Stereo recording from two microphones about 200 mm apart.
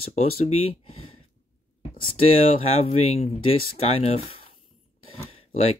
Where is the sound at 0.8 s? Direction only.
90° left.